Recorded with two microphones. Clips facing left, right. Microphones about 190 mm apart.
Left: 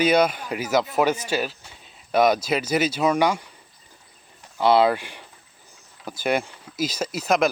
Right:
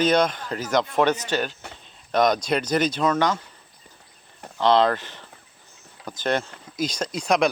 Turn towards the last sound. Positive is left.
turn(degrees=0)  # may be behind; listen again after turning